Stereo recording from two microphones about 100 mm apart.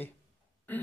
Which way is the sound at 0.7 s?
20° left (ahead or behind).